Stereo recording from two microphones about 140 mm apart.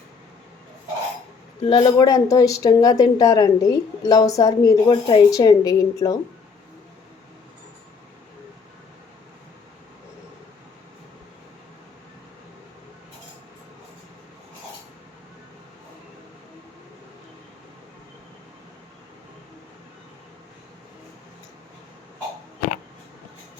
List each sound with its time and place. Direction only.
1.6 s speech: 30° left (ahead or behind)
4.9 s speech: 35° left (ahead or behind)
5.3 s speech: 25° left (ahead or behind)